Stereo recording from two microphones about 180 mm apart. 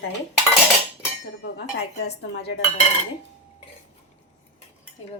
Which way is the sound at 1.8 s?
65° left (ahead or behind).